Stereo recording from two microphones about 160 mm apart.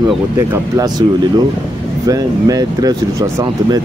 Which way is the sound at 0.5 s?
25° right (ahead or behind).